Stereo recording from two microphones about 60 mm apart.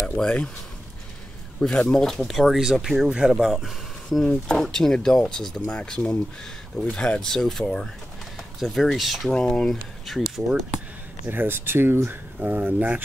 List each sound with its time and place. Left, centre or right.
0.2 s speech: centre
1.6 s speech: centre
9.3 s speech: centre
10.0 s speech: centre
11.2 s speech: right
12.4 s speech: right